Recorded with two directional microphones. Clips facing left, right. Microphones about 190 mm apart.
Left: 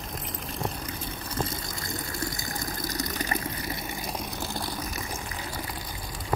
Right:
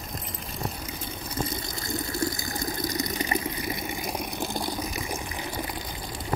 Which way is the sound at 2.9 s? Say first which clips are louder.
Even; 15° right (ahead or behind).